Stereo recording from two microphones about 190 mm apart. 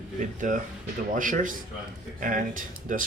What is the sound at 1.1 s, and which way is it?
Speech, 45° right (ahead or behind).